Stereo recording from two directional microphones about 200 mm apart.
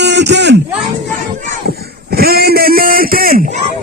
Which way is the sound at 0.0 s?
60° right (ahead or behind).